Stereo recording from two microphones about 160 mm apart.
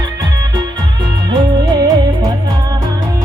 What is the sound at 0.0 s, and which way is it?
Music, 25° right (ahead or behind).